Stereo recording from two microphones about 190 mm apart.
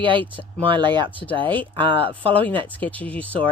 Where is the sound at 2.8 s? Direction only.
10° left (ahead or behind).